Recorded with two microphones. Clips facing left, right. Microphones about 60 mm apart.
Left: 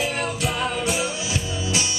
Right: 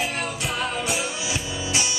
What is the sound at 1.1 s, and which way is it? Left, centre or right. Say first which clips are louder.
Music: left 1 dB; right.